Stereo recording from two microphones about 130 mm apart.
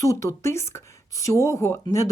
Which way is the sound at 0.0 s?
25° left (ahead or behind).